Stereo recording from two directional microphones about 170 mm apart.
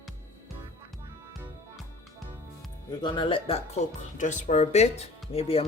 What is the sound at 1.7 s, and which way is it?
Music, centre (ahead or behind).